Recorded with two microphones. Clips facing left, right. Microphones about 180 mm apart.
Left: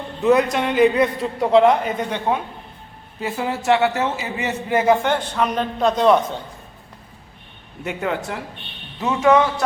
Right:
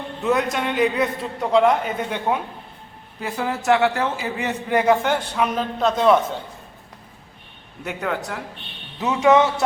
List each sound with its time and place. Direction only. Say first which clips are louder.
0.2 s a man's voice: left 5 dB; centre (ahead or behind)
5.0 s a man's voice: left 1 dB; 10° right (ahead or behind)
7.9 s a man's voice: left 2 dB; centre (ahead or behind)
9.0 s speech: even; 15° right (ahead or behind)